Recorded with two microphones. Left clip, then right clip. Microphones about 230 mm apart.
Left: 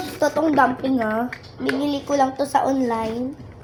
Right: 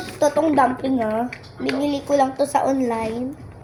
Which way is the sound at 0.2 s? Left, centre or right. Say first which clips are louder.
Right 1 dB; centre.